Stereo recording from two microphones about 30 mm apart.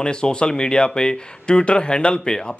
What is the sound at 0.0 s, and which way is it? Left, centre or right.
Speech, left.